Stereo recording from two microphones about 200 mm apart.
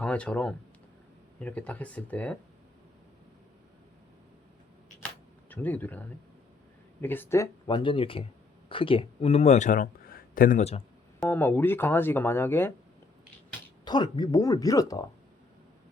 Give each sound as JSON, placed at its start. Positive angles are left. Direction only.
{"t": 0.0, "sound": "speech", "side_deg": 5}
{"t": 4.9, "sound": "camera", "side_deg": 10}
{"t": 7.0, "sound": "speech", "side_deg": 10}
{"t": 11.2, "sound": "speech", "side_deg": 10}
{"t": 13.8, "sound": "speech", "side_deg": 20}